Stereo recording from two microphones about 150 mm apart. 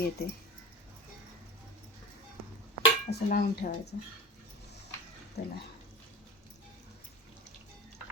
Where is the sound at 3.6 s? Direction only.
70° left (ahead or behind).